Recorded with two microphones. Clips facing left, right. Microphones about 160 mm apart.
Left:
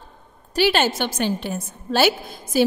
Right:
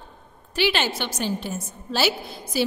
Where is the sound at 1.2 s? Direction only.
60° left (ahead or behind).